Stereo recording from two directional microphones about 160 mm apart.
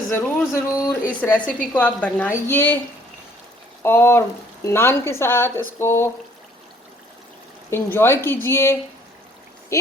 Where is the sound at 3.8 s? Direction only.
15° left (ahead or behind).